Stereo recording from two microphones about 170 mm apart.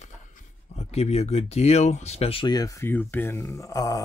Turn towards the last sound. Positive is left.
turn(degrees=20)  # may be behind; listen again after turning